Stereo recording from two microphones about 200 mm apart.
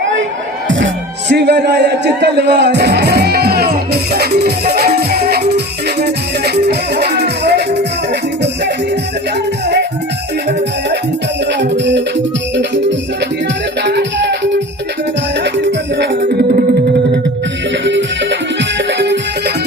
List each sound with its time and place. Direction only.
1.3 s music: 55° right (ahead or behind)
11.6 s music: 60° right (ahead or behind)
13.8 s music: 60° right (ahead or behind)
16.2 s music: 45° right (ahead or behind)
17.8 s music: 60° right (ahead or behind)